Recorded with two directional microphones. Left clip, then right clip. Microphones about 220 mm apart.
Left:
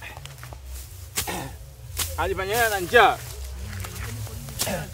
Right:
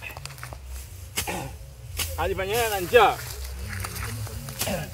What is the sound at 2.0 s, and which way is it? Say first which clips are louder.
Speech: left 1 dB; 15° left (ahead or behind).